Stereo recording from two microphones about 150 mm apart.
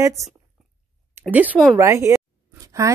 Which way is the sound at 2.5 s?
25° right (ahead or behind).